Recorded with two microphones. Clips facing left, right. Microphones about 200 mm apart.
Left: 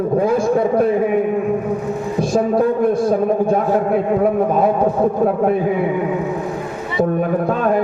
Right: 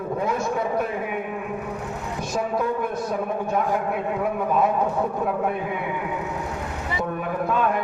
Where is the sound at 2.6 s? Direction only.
35° left (ahead or behind).